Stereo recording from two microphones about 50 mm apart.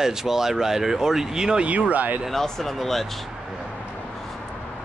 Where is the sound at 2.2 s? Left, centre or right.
Centre.